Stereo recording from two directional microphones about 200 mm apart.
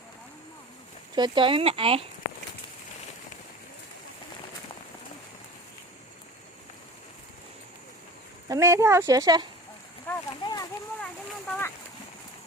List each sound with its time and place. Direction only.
1.1 s speech: 25° right (ahead or behind)
8.4 s speech: 15° right (ahead or behind)
10.1 s speech: 15° left (ahead or behind)
11.0 s speech: 5° left (ahead or behind)